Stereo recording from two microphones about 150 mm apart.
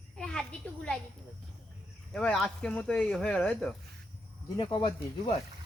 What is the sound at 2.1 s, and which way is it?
A child's voice, 5° left (ahead or behind).